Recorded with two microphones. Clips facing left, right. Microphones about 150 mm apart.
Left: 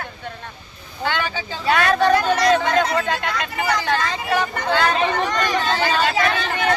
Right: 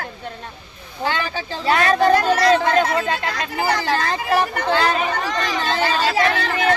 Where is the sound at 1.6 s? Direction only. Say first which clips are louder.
Right 1 dB; 35° right (ahead or behind).